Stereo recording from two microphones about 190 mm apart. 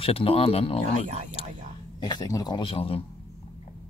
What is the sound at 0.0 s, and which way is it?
Speech, 30° left (ahead or behind).